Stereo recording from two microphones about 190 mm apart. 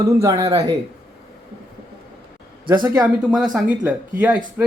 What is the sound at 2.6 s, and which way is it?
Speech, 25° right (ahead or behind).